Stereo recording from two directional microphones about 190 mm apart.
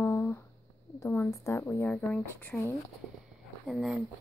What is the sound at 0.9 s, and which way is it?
A woman's voice, 15° left (ahead or behind).